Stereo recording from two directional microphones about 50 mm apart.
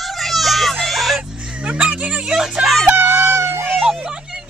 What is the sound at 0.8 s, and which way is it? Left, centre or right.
Music, centre.